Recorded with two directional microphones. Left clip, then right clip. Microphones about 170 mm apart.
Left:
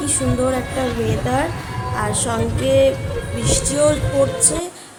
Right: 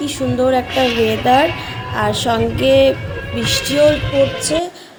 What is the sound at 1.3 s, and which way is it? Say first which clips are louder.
A woman's voice: right 8 dB; 20° right (ahead or behind).